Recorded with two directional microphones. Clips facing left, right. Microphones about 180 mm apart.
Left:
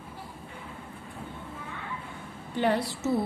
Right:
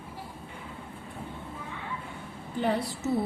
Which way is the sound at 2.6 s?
75° left (ahead or behind).